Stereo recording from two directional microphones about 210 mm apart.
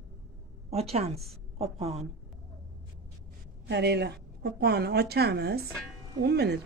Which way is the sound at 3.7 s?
55° right (ahead or behind).